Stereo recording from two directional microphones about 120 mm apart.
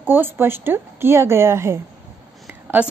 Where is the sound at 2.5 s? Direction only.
15° right (ahead or behind).